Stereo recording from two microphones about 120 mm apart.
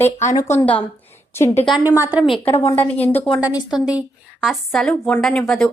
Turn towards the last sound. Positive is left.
turn(degrees=5)  # may be behind; listen again after turning